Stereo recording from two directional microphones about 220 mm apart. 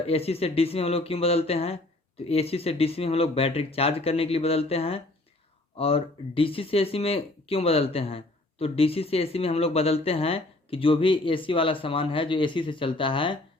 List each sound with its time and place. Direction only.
0.0 s speech: 25° left (ahead or behind)